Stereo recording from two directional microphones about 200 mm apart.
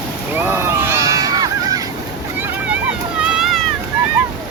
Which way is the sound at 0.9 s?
15° right (ahead or behind).